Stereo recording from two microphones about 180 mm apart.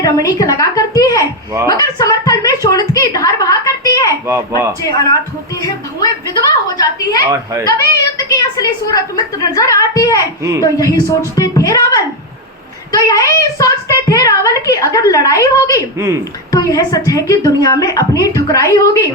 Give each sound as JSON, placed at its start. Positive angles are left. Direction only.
{"t": 0.0, "sound": "a woman's voice", "side_deg": 20}
{"t": 4.3, "sound": "speech", "side_deg": -15}
{"t": 4.8, "sound": "a woman's voice", "side_deg": 20}
{"t": 8.3, "sound": "a woman's voice", "side_deg": 20}